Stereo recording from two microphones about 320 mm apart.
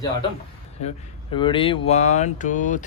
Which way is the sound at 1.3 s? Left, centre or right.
Centre.